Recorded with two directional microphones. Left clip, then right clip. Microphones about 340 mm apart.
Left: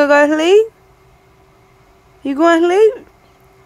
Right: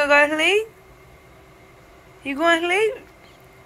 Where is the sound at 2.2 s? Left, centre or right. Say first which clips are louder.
Left 7 dB; left.